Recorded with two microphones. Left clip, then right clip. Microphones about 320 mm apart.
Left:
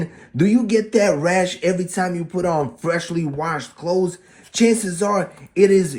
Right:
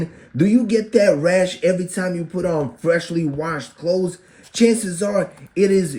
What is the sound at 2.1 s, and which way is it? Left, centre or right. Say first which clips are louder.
Speech: even; left.